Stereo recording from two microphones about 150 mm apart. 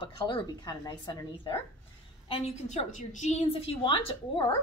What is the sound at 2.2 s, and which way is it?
A woman's voice, 40° left (ahead or behind).